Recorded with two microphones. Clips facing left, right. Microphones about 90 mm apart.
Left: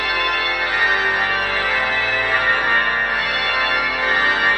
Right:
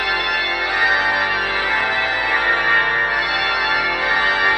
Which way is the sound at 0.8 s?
5° right (ahead or behind).